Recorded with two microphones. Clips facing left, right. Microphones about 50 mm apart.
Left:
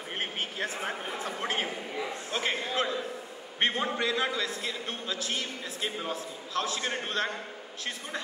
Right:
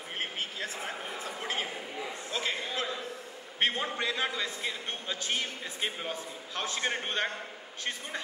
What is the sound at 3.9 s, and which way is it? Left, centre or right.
A man's voice, centre.